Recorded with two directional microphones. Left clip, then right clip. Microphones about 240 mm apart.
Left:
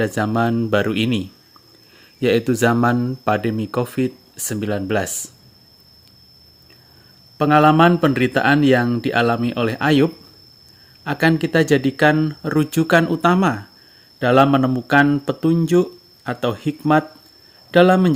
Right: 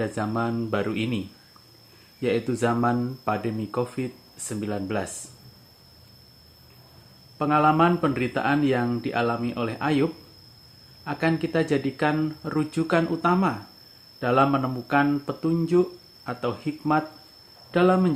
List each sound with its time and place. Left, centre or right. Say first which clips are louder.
0.0 s speech: left 8 dB; left
2.2 s speech: left 8 dB; left
7.3 s speech: left 7 dB; left